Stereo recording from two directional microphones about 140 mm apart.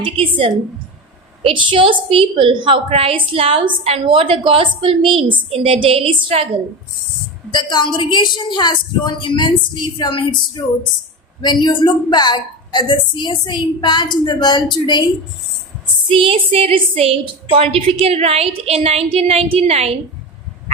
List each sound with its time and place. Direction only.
0.0 s a woman's voice: 40° right (ahead or behind)
7.5 s a woman's voice: 30° left (ahead or behind)
16.1 s a woman's voice: 40° right (ahead or behind)